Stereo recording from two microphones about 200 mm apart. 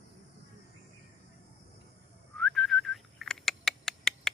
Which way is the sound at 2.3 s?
Centre (ahead or behind).